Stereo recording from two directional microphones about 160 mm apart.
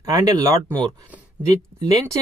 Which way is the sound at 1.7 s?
20° right (ahead or behind).